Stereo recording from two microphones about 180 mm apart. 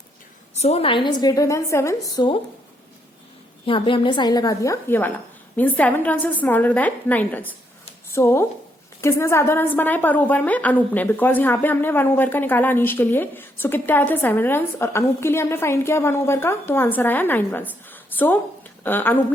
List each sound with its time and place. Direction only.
0.5 s a woman's voice: 35° left (ahead or behind)
3.7 s a woman's voice: 30° left (ahead or behind); by 19.2 s 10° left (ahead or behind)